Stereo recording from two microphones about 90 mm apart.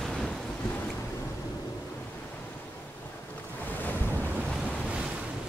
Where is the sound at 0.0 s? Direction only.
5° left (ahead or behind).